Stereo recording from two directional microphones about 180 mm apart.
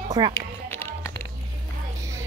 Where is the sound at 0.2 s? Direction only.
25° right (ahead or behind).